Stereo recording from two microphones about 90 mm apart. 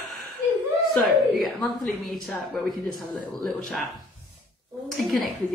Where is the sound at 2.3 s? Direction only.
15° left (ahead or behind).